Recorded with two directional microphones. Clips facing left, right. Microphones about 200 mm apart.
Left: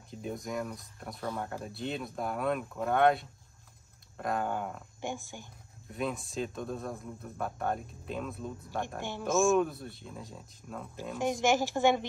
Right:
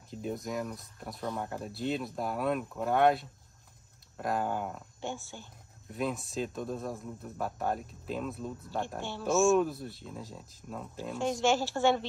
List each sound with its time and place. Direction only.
0.1 s speech: centre (ahead or behind)
5.0 s speech: 15° left (ahead or behind)
5.9 s speech: centre (ahead or behind)
11.1 s speech: 15° left (ahead or behind)